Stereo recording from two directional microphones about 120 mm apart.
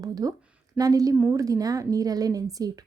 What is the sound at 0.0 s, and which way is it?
A woman's voice, 30° right (ahead or behind).